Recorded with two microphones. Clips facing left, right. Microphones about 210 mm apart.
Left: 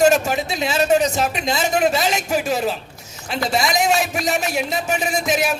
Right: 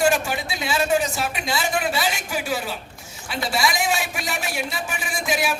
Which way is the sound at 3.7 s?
40° left (ahead or behind).